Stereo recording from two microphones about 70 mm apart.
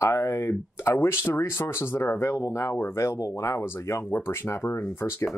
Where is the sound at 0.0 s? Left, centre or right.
Left.